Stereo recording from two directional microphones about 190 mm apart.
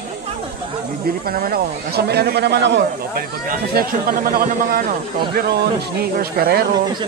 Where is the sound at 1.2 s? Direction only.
50° right (ahead or behind); by 3.2 s 65° right (ahead or behind).